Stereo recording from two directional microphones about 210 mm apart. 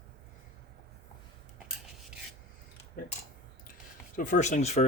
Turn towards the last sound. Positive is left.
turn(degrees=30)  # may be behind; listen again after turning